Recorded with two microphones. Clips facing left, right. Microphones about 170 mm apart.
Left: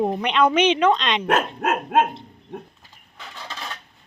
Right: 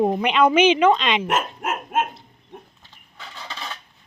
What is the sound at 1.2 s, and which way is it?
Dog, 65° left (ahead or behind).